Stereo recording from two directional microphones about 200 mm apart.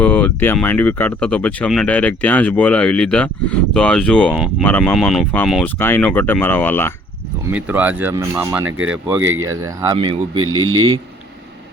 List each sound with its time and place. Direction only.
0.0 s speech: 5° left (ahead or behind)
7.5 s speech: 10° right (ahead or behind)
8.6 s speech: 80° right
9.2 s speech: 90° right
9.5 s speech: 15° right (ahead or behind)
10.3 s speech: 90° right